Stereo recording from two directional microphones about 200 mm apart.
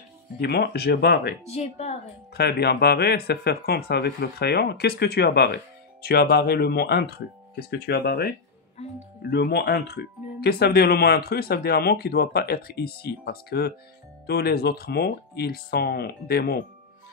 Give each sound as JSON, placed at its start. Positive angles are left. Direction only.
{"t": 0.4, "sound": "speech", "side_deg": 55}
{"t": 1.5, "sound": "speech", "side_deg": 35}
{"t": 2.3, "sound": "speech", "side_deg": 55}
{"t": 9.3, "sound": "speech", "side_deg": 55}